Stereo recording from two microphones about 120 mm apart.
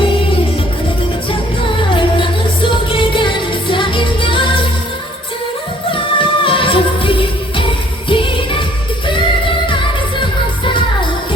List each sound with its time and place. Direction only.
0.0 s music: 45° left (ahead or behind)
1.9 s music: 45° left (ahead or behind)
5.9 s music: 45° left (ahead or behind)
9.6 s music: 45° left (ahead or behind)